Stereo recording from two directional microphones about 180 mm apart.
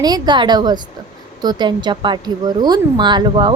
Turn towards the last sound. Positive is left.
turn(degrees=-25)  # may be behind; listen again after turning